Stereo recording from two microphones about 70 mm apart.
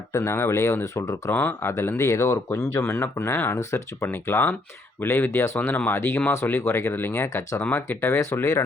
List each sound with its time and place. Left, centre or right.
0.1 s speech: left
1.3 s speech: left
1.7 s speech: left
2.9 s speech: left
3.5 s speech: left
4.0 s speech: left